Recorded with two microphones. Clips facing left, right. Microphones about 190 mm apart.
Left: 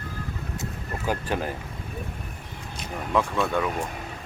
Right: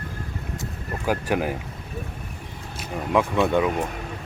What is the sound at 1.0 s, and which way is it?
Speech, 10° right (ahead or behind).